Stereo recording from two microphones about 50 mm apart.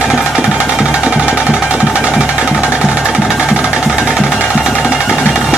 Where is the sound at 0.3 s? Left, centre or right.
Centre.